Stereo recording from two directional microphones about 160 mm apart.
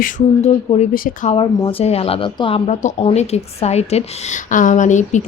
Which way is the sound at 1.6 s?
35° left (ahead or behind).